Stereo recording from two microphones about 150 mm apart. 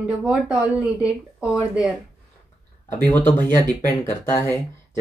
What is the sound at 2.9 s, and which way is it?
Speech, 10° left (ahead or behind).